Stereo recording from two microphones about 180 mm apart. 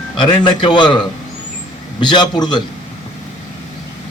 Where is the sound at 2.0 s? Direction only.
25° left (ahead or behind).